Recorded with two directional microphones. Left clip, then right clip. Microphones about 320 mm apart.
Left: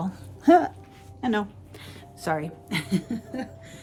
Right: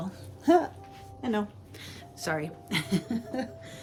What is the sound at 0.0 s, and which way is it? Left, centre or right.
Dog, centre.